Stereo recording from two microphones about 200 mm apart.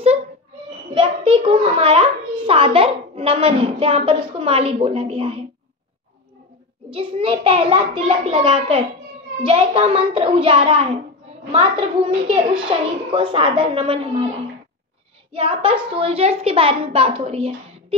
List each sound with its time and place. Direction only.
0.9 s a child's voice: 25° right (ahead or behind)
6.9 s a child's voice: 25° right (ahead or behind)
15.3 s a child's voice: 30° right (ahead or behind)